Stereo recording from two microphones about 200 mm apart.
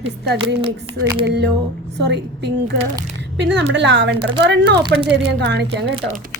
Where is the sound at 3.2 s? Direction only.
60° right (ahead or behind).